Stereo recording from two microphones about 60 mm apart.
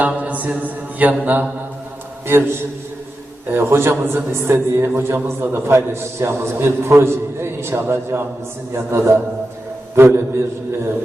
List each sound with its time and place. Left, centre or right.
0.0 s mantra: right
3.5 s a man's voice: right